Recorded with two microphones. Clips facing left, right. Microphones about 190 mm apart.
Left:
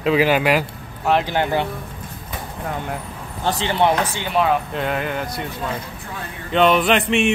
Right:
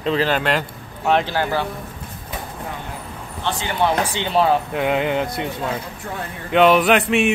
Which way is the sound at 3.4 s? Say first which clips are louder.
Left 3 dB; 35° left (ahead or behind).